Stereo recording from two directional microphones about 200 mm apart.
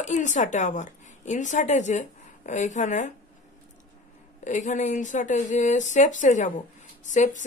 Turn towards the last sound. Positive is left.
turn(degrees=35)  # may be behind; listen again after turning